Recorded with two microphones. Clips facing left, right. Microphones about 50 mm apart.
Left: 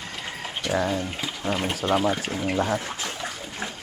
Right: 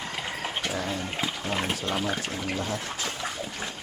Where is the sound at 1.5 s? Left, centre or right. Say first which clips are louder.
Left 7 dB; centre.